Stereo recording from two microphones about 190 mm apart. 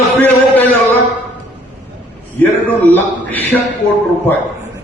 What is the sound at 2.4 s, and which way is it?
A man's voice, 10° left (ahead or behind).